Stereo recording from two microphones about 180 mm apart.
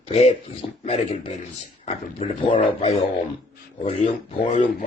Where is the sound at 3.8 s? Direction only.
35° left (ahead or behind).